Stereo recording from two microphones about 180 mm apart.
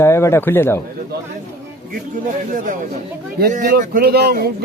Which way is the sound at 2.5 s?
45° right (ahead or behind).